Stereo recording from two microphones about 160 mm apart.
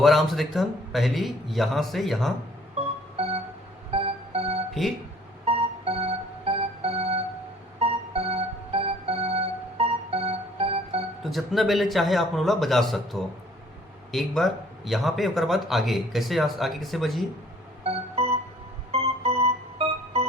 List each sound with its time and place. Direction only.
0.0 s speech: centre (ahead or behind)
3.9 s music: 40° right (ahead or behind)
4.7 s speech: centre (ahead or behind)
5.5 s music: 40° right (ahead or behind)
11.2 s speech: centre (ahead or behind)
17.8 s music: 40° right (ahead or behind)
18.9 s keyboard: 40° right (ahead or behind)